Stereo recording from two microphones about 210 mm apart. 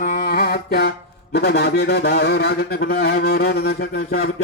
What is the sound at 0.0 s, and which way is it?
Mantra, 40° left (ahead or behind).